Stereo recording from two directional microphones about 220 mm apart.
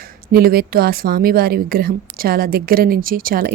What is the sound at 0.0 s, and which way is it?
A woman's voice, 45° right (ahead or behind).